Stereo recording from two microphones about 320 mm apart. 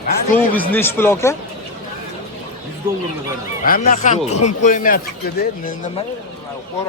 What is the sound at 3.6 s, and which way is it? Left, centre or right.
Speech, left.